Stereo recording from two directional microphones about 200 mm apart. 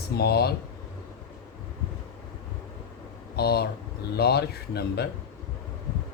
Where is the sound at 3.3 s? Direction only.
50° left (ahead or behind).